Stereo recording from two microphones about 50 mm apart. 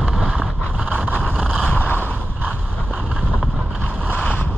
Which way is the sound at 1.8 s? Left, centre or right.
Left.